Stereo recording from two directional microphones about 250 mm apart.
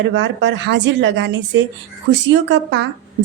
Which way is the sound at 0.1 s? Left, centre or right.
Right.